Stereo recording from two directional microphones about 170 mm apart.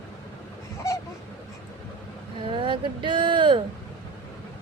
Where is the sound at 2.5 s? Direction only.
30° right (ahead or behind).